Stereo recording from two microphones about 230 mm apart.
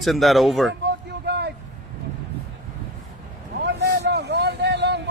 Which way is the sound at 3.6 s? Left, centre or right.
Right.